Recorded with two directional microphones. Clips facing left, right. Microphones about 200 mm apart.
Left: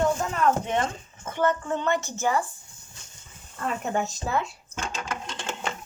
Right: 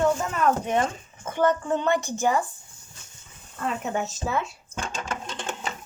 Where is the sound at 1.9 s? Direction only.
15° right (ahead or behind).